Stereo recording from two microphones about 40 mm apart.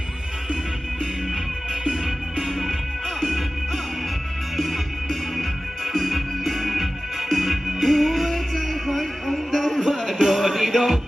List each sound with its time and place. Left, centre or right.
2.4 s music: centre
4.5 s music: centre